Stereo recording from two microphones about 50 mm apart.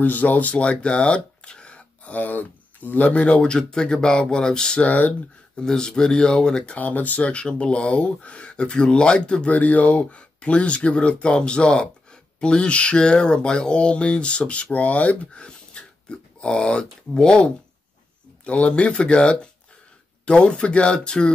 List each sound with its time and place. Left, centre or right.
0.0 s speech: left; by 4.8 s centre
4.8 s speech: left
5.6 s speech: centre
6.8 s speech: left
9.5 s speech: left